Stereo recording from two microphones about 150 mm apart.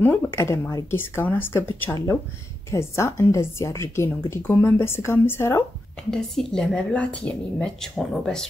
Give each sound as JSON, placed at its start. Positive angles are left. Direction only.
{"t": 0.0, "sound": "speech", "side_deg": 15}
{"t": 6.0, "sound": "speech", "side_deg": 5}